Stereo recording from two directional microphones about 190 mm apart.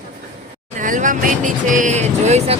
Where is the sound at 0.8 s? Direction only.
45° right (ahead or behind).